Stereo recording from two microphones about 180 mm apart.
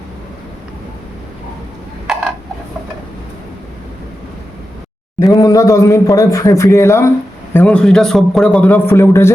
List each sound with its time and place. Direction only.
5.2 s speech: 20° left (ahead or behind)